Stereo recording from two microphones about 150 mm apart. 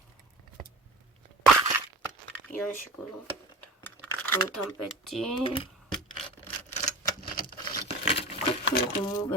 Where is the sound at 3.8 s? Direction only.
15° left (ahead or behind).